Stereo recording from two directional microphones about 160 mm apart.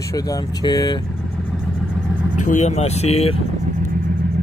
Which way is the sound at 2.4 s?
50° left (ahead or behind).